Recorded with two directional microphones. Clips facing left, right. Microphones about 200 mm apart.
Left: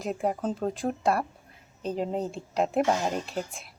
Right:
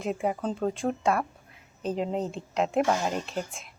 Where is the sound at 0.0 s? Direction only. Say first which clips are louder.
Even; centre (ahead or behind).